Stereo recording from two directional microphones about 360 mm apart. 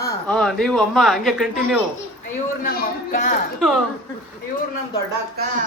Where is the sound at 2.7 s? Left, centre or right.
Left.